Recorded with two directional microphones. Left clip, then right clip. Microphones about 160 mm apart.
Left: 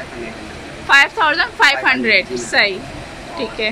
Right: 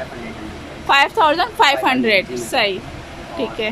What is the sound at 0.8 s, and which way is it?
A woman's voice, 20° right (ahead or behind).